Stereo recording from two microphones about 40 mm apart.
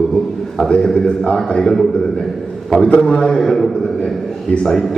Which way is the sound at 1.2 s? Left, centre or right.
Centre.